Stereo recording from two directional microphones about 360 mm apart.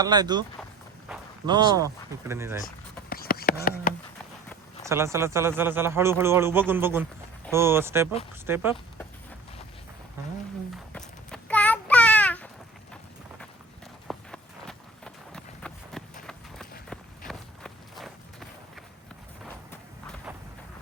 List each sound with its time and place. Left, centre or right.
0.0 s a man's voice: centre
3.1 s a sound: left
4.8 s a man's voice: centre
10.9 s a sound: centre
14.1 s run: centre
16.9 s walk: centre